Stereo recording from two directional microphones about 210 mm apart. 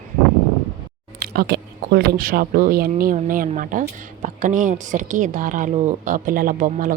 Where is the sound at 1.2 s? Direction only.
45° right (ahead or behind).